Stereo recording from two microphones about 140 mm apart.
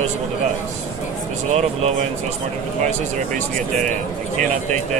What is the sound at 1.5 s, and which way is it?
Speech, 50° right (ahead or behind).